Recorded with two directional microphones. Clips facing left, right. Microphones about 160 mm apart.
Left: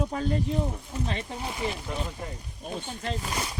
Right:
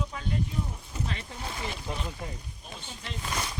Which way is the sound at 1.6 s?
15° left (ahead or behind).